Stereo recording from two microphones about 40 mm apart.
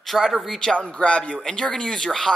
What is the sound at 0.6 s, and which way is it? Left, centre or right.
Speech, centre.